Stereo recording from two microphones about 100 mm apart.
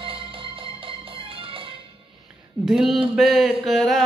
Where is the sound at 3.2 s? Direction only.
5° right (ahead or behind).